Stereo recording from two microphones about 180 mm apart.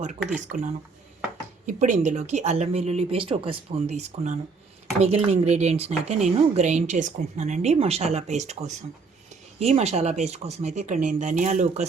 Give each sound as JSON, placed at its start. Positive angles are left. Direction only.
{"t": 0.2, "sound": "speech", "side_deg": -5}
{"t": 1.6, "sound": "a woman's voice", "side_deg": -40}